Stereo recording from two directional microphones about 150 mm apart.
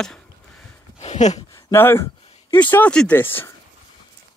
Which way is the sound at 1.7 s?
15° left (ahead or behind).